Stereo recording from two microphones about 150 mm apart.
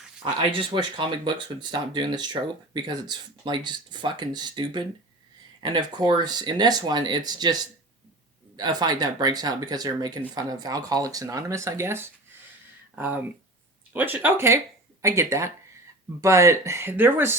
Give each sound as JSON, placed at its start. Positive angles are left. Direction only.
{"t": 0.3, "sound": "speech", "side_deg": -30}
{"t": 13.9, "sound": "speech", "side_deg": -10}